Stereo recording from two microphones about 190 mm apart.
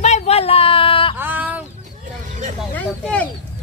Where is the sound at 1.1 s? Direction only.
10° right (ahead or behind).